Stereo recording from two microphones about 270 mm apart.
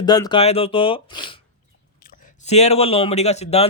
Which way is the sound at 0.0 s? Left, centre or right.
Centre.